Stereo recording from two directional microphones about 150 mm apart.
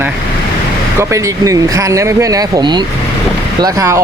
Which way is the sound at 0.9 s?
20° right (ahead or behind).